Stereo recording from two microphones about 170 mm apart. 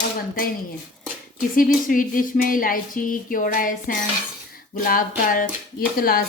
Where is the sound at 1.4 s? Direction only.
55° left (ahead or behind).